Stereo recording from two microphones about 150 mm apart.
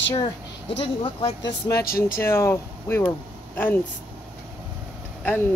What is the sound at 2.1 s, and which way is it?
Speech, 15° left (ahead or behind).